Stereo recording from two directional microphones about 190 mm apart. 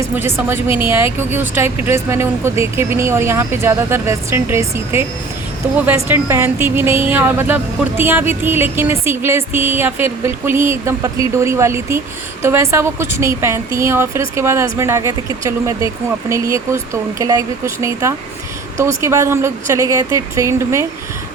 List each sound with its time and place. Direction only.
0.0 s a woman's voice: 15° right (ahead or behind)